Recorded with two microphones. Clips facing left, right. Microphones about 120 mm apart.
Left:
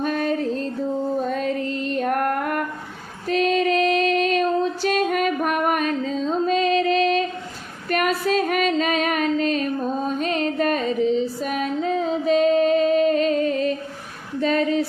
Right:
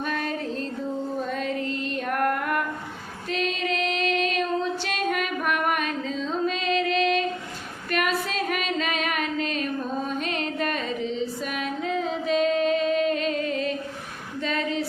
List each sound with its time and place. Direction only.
0.0 s music: 40° left (ahead or behind)
1.3 s female singing: 45° left (ahead or behind)
3.2 s child singing: 45° left (ahead or behind)
7.9 s female singing: 45° left (ahead or behind)
14.4 s a sound: 40° left (ahead or behind)